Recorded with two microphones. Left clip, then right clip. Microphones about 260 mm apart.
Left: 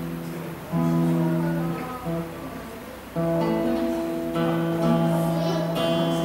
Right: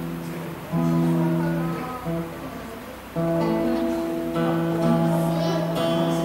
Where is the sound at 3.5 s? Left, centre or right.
Left.